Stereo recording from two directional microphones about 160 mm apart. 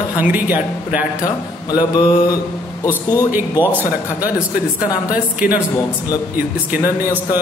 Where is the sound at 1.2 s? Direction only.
25° left (ahead or behind).